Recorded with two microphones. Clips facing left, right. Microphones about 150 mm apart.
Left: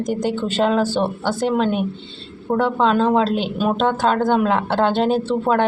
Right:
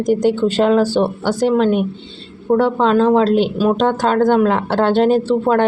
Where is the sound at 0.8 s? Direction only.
10° right (ahead or behind).